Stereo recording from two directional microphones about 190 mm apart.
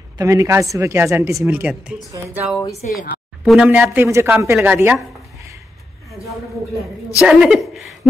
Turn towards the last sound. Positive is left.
turn(degrees=0)  # may be behind; listen again after turning